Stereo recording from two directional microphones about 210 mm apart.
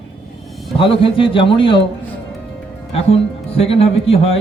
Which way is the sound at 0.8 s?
25° left (ahead or behind).